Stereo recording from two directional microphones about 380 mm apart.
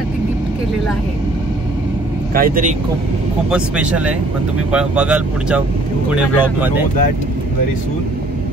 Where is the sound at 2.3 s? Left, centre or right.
Right.